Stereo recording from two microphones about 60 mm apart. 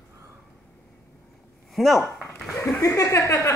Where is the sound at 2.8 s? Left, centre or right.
Left.